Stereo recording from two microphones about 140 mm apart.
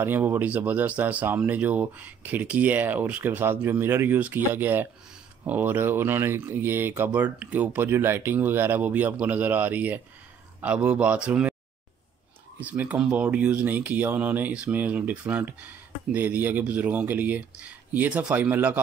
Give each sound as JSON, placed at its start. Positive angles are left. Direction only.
{"t": 0.0, "sound": "speech", "side_deg": -15}
{"t": 12.5, "sound": "speech", "side_deg": -10}